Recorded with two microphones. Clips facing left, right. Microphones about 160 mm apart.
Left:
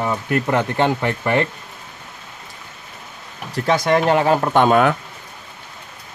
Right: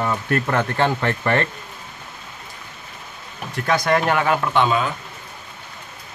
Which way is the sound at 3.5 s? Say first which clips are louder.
Left 2 dB; 25° left (ahead or behind).